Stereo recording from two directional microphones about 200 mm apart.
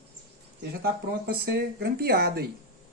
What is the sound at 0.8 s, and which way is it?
Speech, 50° right (ahead or behind).